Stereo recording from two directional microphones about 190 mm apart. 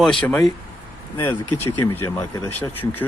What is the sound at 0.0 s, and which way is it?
Speech, 5° left (ahead or behind).